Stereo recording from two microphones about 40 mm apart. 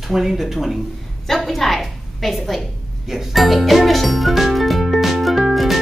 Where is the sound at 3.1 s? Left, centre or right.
Centre.